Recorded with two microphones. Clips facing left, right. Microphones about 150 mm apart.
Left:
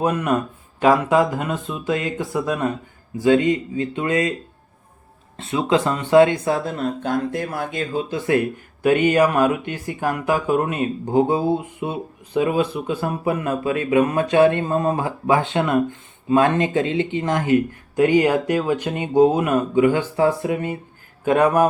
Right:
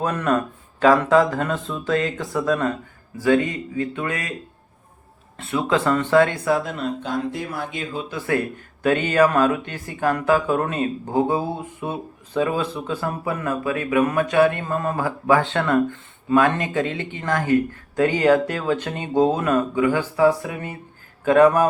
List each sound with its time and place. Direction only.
0.0 s speech: 15° left (ahead or behind)
5.4 s speech: 20° left (ahead or behind)
6.7 s speech: 45° left (ahead or behind)
8.1 s speech: 20° left (ahead or behind)